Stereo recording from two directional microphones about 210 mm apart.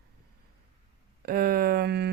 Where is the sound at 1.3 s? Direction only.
45° right (ahead or behind).